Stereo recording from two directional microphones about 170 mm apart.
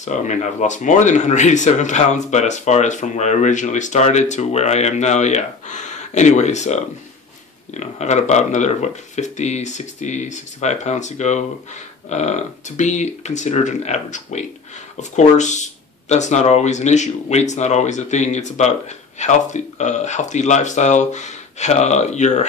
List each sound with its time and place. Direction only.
0.0 s speech: 45° left (ahead or behind)